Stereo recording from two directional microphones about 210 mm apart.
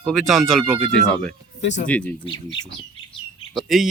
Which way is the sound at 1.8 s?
5° left (ahead or behind).